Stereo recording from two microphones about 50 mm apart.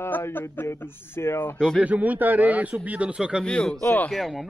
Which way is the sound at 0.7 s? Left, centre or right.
Left.